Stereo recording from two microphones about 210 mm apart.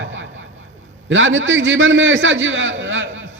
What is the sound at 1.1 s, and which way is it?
A man's voice, 65° right (ahead or behind).